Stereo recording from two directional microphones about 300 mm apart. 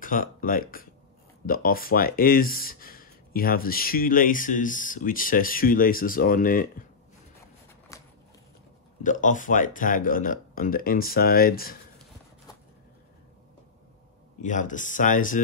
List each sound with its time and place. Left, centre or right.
0.0 s speech: left
7.9 s a sound: centre
9.0 s speech: left
14.4 s speech: left